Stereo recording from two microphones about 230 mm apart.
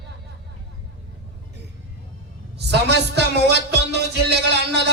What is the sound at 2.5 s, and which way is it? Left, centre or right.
Music, right.